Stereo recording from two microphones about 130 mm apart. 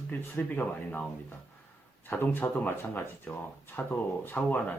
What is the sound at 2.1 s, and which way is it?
Speech, 15° left (ahead or behind).